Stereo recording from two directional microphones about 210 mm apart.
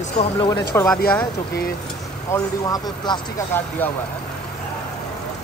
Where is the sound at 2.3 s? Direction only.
20° left (ahead or behind).